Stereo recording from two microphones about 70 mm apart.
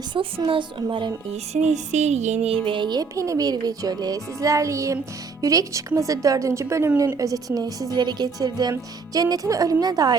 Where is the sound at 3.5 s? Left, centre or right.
Right.